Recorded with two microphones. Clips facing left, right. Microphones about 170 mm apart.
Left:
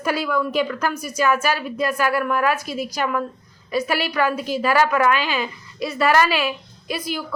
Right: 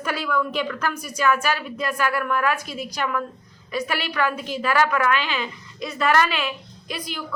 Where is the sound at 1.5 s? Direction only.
40° left (ahead or behind).